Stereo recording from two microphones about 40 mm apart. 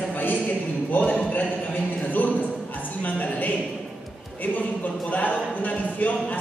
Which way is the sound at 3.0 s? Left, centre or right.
Left.